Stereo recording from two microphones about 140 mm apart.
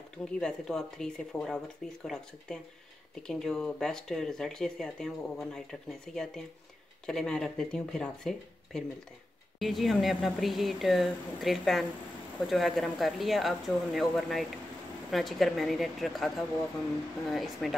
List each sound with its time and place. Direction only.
0.2 s speech: 5° left (ahead or behind)